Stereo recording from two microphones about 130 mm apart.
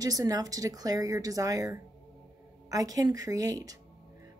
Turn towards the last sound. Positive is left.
turn(degrees=-25)  # may be behind; listen again after turning